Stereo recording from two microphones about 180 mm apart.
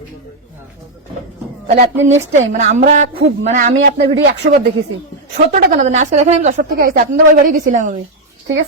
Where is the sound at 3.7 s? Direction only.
80° right.